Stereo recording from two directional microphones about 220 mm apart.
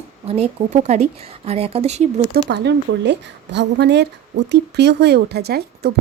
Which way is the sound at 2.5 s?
50° right (ahead or behind).